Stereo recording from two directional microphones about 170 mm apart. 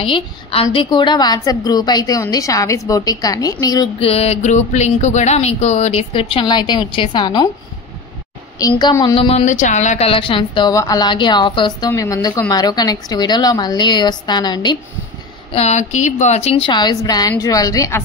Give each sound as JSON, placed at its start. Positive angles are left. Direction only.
{"t": 0.0, "sound": "a woman's voice", "side_deg": 30}
{"t": 4.0, "sound": "speech", "side_deg": 35}
{"t": 8.5, "sound": "a woman's voice", "side_deg": 25}
{"t": 9.5, "sound": "a woman's voice", "side_deg": 45}
{"t": 15.5, "sound": "a woman's voice", "side_deg": 40}